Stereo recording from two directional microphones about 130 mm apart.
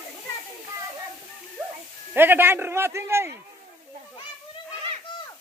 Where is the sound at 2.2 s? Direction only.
15° right (ahead or behind).